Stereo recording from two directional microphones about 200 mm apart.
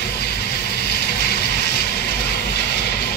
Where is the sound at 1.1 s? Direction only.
55° left (ahead or behind).